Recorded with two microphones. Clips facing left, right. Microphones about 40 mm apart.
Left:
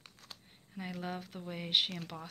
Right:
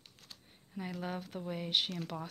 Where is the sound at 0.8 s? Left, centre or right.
Centre.